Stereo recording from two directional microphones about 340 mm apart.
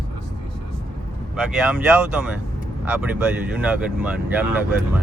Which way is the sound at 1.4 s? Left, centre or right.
Centre.